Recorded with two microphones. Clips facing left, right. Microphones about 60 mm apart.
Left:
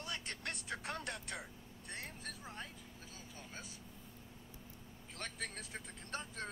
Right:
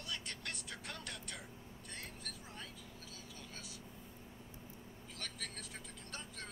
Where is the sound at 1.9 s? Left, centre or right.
Left.